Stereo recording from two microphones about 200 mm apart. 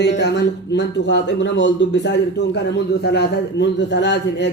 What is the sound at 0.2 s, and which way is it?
A man's voice, 60° left (ahead or behind).